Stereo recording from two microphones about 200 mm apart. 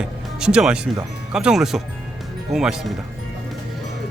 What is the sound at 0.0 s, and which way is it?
Music, 5° right (ahead or behind).